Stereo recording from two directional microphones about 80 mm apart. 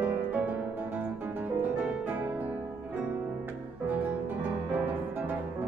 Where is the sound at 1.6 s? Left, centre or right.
Right.